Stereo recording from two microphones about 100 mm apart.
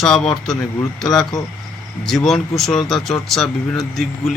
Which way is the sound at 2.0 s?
5° left (ahead or behind).